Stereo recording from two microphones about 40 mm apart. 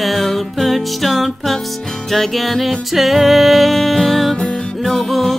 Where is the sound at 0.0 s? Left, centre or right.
Centre.